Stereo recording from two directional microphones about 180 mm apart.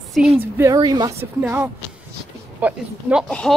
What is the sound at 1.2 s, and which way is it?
Speech, 10° right (ahead or behind).